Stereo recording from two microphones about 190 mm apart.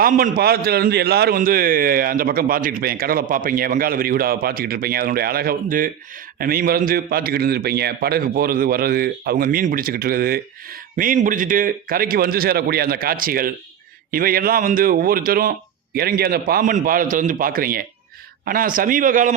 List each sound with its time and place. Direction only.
0.0 s a man's voice: 50° right (ahead or behind)